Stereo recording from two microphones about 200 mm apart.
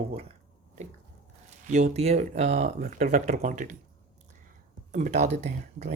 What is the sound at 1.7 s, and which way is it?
Speech, 35° right (ahead or behind).